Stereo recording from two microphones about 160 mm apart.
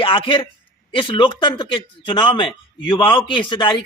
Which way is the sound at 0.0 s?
30° left (ahead or behind).